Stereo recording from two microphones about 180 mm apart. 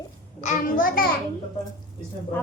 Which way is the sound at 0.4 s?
50° left (ahead or behind).